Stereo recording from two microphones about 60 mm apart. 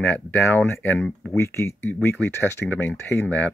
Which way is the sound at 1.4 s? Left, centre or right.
Left.